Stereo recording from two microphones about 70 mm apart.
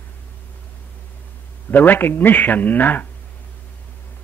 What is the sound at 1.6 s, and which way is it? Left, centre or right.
A man's voice, left.